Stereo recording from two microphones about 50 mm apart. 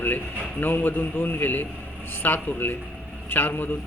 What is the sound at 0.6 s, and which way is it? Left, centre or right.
A man's voice, left.